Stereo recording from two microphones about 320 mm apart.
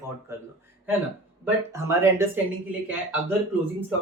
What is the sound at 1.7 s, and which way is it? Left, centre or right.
Speech, centre.